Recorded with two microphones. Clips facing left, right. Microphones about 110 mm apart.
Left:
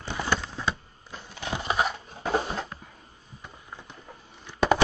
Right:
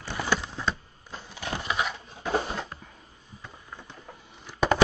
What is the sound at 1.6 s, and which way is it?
Crushing, 35° left (ahead or behind).